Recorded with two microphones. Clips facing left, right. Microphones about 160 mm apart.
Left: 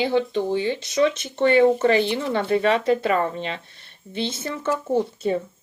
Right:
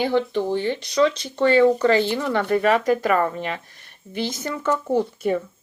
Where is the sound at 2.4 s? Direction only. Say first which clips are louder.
Right 1 dB; 50° right (ahead or behind).